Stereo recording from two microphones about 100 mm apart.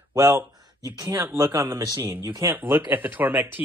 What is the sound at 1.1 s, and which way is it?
Speech, 30° right (ahead or behind).